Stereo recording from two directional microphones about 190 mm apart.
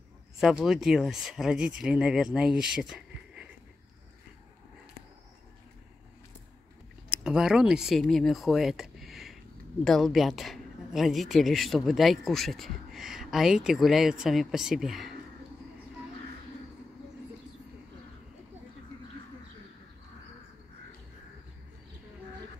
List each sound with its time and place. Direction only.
0.4 s speech: centre (ahead or behind)
7.2 s speech: 5° right (ahead or behind)